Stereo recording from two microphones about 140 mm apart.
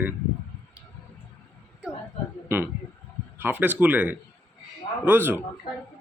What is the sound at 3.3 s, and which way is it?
Speech, 15° right (ahead or behind).